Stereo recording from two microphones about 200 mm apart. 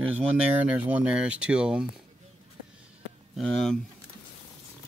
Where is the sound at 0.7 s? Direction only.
5° right (ahead or behind).